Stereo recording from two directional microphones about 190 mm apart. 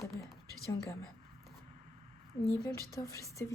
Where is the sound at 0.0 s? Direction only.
Centre (ahead or behind).